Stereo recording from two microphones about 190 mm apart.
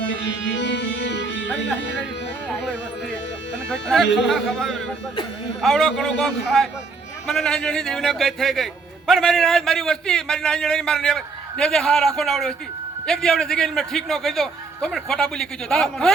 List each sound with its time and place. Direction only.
0.1 s music: 70° left (ahead or behind)
3.7 s a man's voice: 5° left (ahead or behind)